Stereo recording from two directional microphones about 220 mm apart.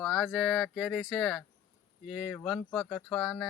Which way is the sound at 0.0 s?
Centre (ahead or behind).